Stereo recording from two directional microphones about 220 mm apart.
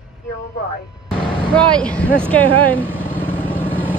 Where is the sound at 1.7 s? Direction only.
5° left (ahead or behind).